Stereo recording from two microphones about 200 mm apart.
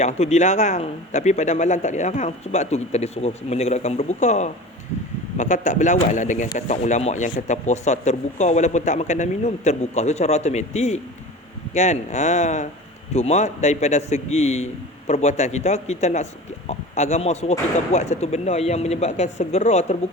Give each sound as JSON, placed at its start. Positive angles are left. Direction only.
{"t": 0.0, "sound": "speech", "side_deg": 35}